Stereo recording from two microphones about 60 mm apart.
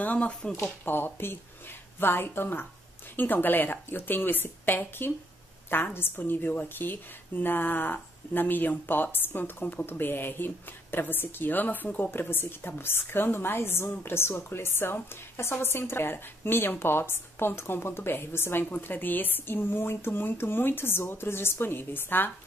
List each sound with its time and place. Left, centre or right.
0.0 s speech: left
0.7 s a woman's voice: left